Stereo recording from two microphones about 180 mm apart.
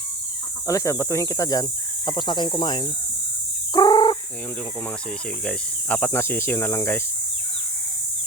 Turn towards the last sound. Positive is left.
turn(degrees=15)  # may be behind; listen again after turning